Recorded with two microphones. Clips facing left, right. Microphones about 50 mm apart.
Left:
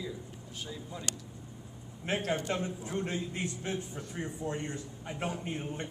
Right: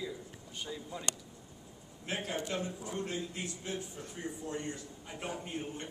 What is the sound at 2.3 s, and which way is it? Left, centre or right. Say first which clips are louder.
Speech: left 5 dB; left.